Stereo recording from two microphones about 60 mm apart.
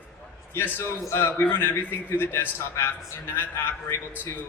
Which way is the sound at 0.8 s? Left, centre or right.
Left.